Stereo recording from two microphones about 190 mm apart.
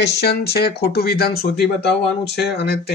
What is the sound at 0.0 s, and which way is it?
Speech, 60° left (ahead or behind).